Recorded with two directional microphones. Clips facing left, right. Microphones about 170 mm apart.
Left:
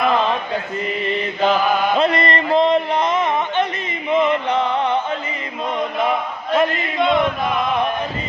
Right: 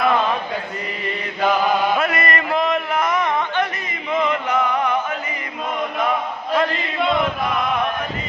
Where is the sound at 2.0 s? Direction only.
30° left (ahead or behind).